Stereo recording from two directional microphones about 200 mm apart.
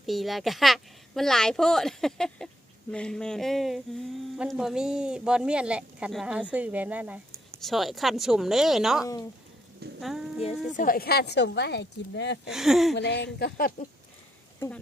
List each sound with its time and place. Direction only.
0.0 s speech: centre (ahead or behind)
10.8 s speech: 45° left (ahead or behind)
12.5 s speech: centre (ahead or behind)
13.0 s speech: 60° left (ahead or behind)